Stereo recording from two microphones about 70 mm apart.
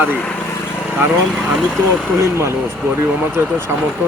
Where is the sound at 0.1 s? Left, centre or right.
Centre.